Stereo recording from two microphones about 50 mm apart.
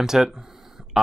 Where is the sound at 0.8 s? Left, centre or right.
Centre.